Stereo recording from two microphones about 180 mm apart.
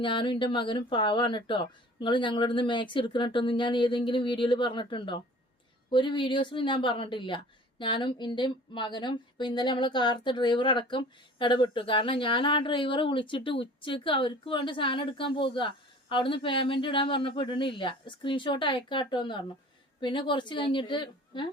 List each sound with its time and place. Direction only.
0.0 s a woman's voice: 25° left (ahead or behind)